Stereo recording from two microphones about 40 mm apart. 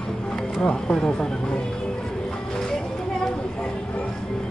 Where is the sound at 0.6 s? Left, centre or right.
Left.